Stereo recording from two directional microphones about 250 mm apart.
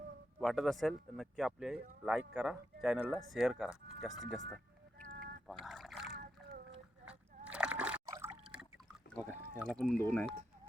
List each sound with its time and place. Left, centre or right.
0.3 s speech: centre
4.9 s duck: right
5.6 s a sound: centre
6.1 s splash: right
7.0 s slosh: centre
9.6 s speech: centre